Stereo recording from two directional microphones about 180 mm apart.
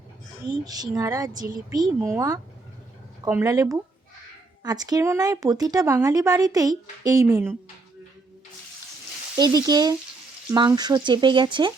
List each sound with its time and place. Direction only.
0.6 s speech: 20° right (ahead or behind)
9.4 s speech: 20° right (ahead or behind)